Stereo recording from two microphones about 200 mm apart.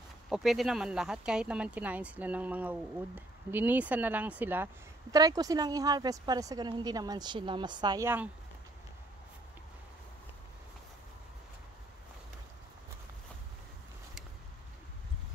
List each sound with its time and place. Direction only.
0.3 s a woman's voice: centre (ahead or behind)